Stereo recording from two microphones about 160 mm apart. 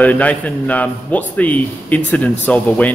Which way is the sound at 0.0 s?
10° left (ahead or behind).